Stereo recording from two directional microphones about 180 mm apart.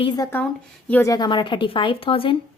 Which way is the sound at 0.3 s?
10° left (ahead or behind).